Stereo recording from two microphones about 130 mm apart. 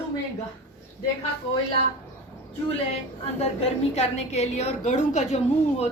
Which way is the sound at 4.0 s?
55° left (ahead or behind).